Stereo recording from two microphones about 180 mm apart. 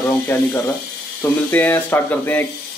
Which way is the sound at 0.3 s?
15° left (ahead or behind).